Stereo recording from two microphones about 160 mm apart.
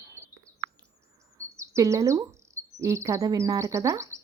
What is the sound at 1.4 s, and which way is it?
Bird, 20° right (ahead or behind).